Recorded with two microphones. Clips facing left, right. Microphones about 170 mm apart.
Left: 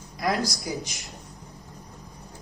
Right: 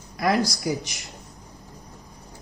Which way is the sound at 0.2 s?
70° right (ahead or behind).